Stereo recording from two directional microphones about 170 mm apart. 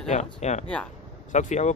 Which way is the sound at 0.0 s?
40° left (ahead or behind).